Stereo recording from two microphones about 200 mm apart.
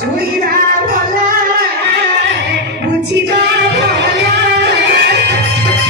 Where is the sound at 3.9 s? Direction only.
55° right (ahead or behind).